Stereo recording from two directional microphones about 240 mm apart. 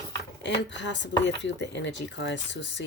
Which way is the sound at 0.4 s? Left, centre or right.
Left.